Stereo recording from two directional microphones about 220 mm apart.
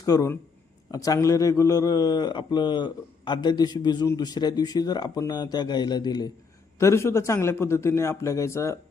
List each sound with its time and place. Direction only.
0.0 s a man's voice: 15° left (ahead or behind)